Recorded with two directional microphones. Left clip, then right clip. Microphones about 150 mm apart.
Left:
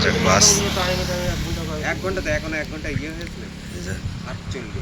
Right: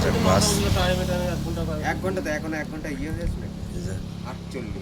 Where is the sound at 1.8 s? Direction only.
75° right (ahead or behind); by 2.7 s 90° right.